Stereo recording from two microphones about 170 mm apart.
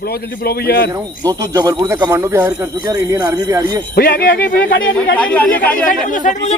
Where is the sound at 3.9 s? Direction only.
65° left (ahead or behind).